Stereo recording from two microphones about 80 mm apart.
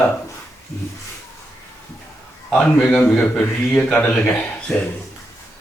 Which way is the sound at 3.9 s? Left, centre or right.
Centre.